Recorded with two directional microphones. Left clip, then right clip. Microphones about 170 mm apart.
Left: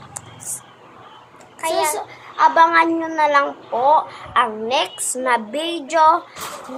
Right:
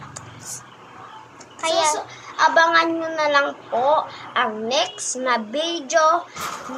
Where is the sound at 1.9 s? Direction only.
20° left (ahead or behind).